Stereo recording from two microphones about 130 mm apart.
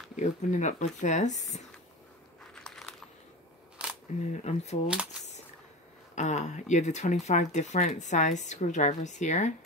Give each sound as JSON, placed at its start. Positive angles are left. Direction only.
{"t": 0.1, "sound": "speech", "side_deg": 70}
{"t": 2.5, "sound": "a sound", "side_deg": 5}
{"t": 4.3, "sound": "speech", "side_deg": 60}
{"t": 6.1, "sound": "speech", "side_deg": 65}